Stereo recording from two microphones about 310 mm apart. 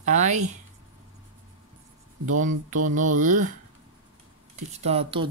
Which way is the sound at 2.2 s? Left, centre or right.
Right.